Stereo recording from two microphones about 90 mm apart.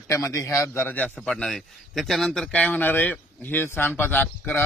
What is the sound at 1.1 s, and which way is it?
A man's voice, 5° left (ahead or behind).